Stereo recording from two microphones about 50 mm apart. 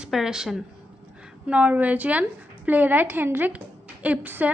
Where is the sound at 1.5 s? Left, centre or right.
Right.